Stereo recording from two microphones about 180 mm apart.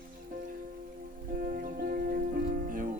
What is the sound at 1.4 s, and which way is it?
Music, 50° right (ahead or behind).